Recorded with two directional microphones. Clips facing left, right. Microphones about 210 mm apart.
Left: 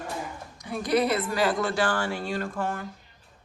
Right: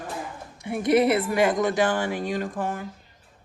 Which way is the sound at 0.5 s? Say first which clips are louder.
Right 4 dB; 25° right (ahead or behind).